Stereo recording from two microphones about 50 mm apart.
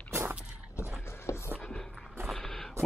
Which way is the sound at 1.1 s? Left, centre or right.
Left.